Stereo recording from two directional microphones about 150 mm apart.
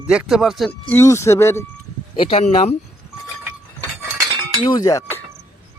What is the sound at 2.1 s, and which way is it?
Speech, 40° left (ahead or behind).